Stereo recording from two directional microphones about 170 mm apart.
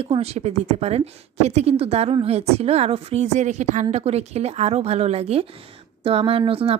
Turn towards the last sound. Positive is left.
turn(degrees=-35)  # may be behind; listen again after turning